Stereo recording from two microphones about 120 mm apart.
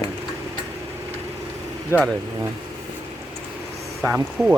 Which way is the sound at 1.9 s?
25° left (ahead or behind).